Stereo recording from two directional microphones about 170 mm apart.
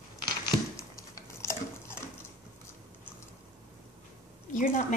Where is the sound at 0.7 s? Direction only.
20° left (ahead or behind).